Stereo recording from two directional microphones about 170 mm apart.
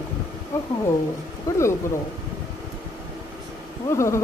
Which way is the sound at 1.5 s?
20° left (ahead or behind).